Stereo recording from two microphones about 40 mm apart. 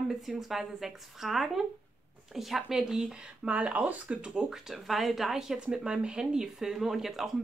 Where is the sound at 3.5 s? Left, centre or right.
Right.